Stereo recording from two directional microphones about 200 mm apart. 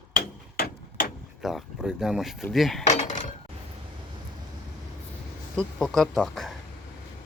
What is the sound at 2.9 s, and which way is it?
Cutlery, 35° left (ahead or behind).